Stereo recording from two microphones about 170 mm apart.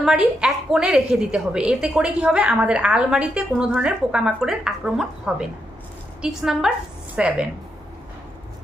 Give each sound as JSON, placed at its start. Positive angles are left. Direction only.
{"t": 0.0, "sound": "a woman's voice", "side_deg": -5}